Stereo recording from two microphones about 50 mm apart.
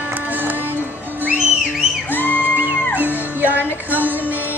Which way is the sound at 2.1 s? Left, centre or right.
Left.